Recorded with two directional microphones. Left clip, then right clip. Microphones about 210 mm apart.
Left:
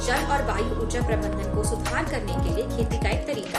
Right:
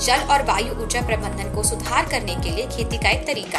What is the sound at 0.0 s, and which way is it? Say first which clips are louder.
Speech: right 6 dB; 10° left (ahead or behind).